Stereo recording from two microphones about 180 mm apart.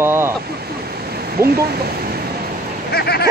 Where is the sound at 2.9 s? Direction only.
65° left (ahead or behind).